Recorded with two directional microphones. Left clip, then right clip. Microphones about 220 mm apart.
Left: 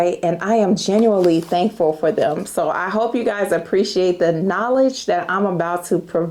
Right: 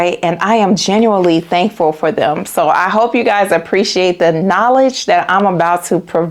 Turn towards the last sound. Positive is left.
turn(degrees=-20)  # may be behind; listen again after turning